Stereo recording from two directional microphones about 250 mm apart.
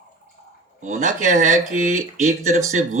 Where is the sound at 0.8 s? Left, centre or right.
Right.